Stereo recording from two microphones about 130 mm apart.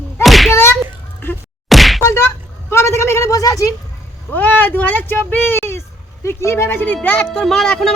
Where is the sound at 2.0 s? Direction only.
20° left (ahead or behind).